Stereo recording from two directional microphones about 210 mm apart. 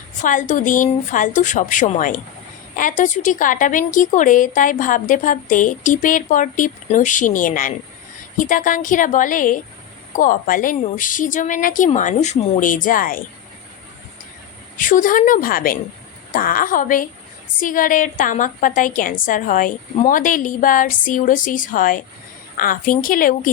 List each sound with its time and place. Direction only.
0.2 s a woman's voice: 40° left (ahead or behind)
14.8 s a woman's voice: 40° left (ahead or behind)